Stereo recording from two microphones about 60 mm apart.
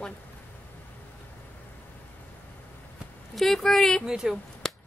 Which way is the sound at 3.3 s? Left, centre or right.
Centre.